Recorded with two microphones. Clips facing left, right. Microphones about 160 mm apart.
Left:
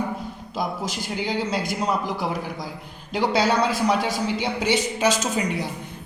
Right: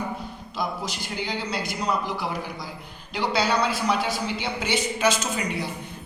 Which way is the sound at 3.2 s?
45° left (ahead or behind).